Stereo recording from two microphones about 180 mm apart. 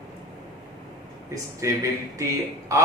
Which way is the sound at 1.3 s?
15° right (ahead or behind).